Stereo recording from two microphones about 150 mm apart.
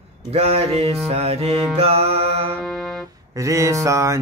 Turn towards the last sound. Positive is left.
turn(degrees=-20)  # may be behind; listen again after turning